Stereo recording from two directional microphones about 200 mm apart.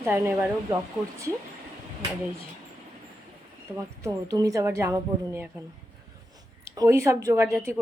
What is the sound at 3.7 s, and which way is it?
A woman's voice, 15° right (ahead or behind).